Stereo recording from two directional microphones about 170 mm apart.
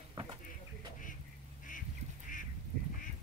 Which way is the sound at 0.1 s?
25° right (ahead or behind).